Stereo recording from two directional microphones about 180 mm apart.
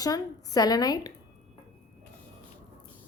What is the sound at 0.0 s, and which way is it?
A woman's voice, 20° left (ahead or behind).